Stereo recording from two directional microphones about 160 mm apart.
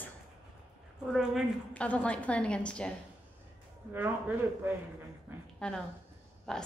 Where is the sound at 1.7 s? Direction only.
10° left (ahead or behind).